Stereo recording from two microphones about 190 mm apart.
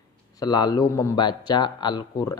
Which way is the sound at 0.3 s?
20° left (ahead or behind).